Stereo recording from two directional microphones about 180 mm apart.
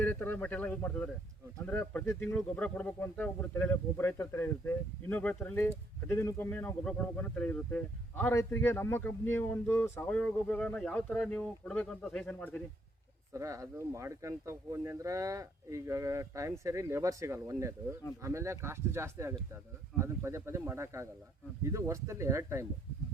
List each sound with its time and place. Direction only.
0.0 s speech: 10° left (ahead or behind)
13.3 s speech: 15° right (ahead or behind)